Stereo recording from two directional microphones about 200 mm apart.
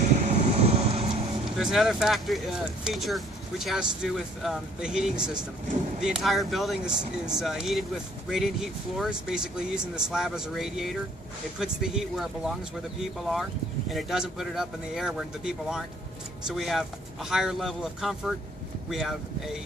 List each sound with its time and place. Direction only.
0.3 s vehicle: 35° right (ahead or behind)
1.5 s speech: centre (ahead or behind)